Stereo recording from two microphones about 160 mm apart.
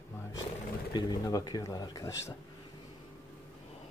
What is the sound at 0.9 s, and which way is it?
Speech, 25° left (ahead or behind).